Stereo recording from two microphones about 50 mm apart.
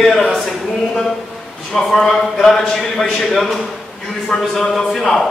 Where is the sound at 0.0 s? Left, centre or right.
Centre.